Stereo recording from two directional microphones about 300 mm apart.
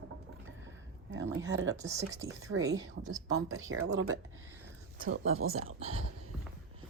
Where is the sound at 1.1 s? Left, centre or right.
Right.